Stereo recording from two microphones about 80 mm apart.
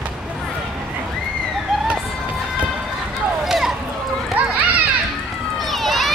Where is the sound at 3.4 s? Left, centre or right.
Centre.